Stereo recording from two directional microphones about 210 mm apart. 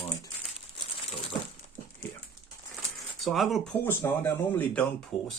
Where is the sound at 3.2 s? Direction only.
Centre (ahead or behind).